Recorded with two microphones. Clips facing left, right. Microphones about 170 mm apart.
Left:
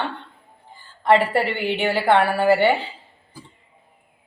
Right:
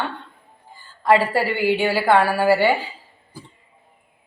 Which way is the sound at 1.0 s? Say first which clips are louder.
Even; 20° left (ahead or behind).